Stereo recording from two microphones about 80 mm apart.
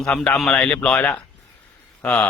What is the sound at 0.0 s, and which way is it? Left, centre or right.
A man's voice, centre.